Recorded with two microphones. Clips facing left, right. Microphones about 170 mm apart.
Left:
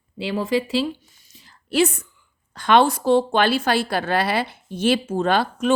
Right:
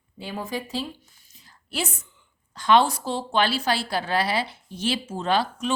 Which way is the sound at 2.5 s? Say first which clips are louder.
Left 3 dB; 60° left (ahead or behind).